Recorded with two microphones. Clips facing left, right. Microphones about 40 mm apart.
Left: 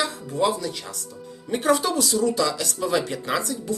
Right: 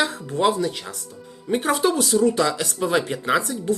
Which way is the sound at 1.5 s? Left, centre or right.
Centre.